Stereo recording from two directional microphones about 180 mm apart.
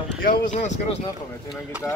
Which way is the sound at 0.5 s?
45° left (ahead or behind).